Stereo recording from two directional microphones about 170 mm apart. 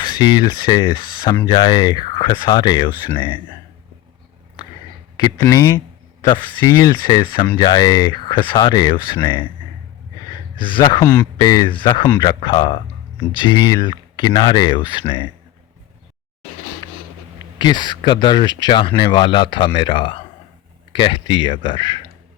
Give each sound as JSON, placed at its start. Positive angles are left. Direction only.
{"t": 0.0, "sound": "speech", "side_deg": 25}
{"t": 5.1, "sound": "speech", "side_deg": 25}
{"t": 10.6, "sound": "speech", "side_deg": 30}
{"t": 10.8, "sound": "speech", "side_deg": 15}
{"t": 12.0, "sound": "speech", "side_deg": 20}
{"t": 17.6, "sound": "speech", "side_deg": 25}